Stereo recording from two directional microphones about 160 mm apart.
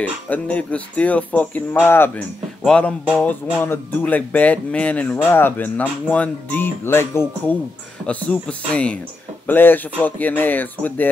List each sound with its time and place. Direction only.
0.0 s speech: 10° left (ahead or behind)
2.6 s music: 5° left (ahead or behind)
3.6 s speech: 10° left (ahead or behind)